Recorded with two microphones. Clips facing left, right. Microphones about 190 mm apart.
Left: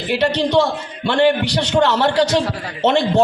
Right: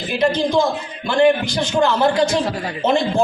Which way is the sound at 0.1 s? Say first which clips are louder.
Left 1 dB; 75° left (ahead or behind).